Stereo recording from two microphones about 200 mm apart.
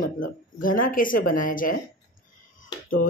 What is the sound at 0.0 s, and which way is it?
Speech, 45° left (ahead or behind).